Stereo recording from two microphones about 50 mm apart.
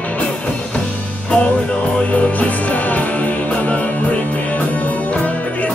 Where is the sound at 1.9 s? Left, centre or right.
Left.